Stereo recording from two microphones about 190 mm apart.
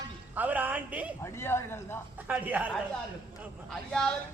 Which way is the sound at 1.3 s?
10° left (ahead or behind).